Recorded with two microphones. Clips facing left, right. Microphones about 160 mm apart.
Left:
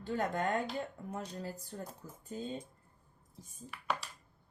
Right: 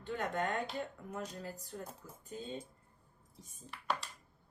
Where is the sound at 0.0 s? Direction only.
35° left (ahead or behind).